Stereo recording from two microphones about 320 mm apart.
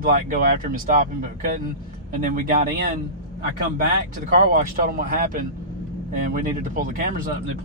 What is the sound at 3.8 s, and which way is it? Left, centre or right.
Speech, right.